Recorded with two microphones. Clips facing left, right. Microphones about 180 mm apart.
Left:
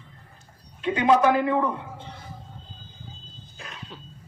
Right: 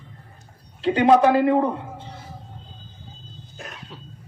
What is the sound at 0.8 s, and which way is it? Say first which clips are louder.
Speech: right 4 dB; 35° right (ahead or behind).